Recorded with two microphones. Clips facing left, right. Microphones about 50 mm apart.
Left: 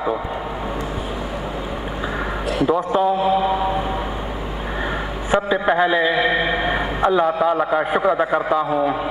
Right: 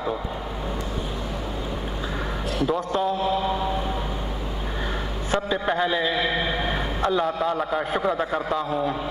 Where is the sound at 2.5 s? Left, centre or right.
Centre.